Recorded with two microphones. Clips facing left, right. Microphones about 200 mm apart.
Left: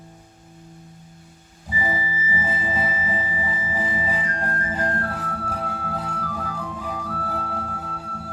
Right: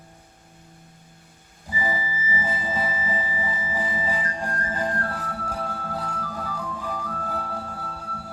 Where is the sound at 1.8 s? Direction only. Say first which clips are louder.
Left 1 dB; 15° left (ahead or behind).